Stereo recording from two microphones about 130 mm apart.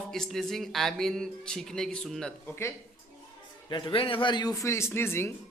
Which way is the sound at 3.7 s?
45° left (ahead or behind).